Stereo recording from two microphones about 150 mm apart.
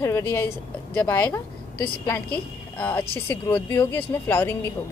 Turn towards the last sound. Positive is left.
turn(degrees=15)  # may be behind; listen again after turning